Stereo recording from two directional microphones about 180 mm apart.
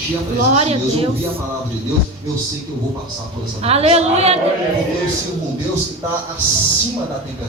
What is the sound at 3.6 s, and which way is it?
Speech, 35° right (ahead or behind).